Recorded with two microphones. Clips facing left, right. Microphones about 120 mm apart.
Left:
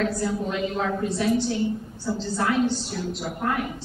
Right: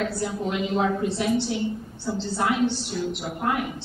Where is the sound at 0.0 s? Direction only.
10° right (ahead or behind).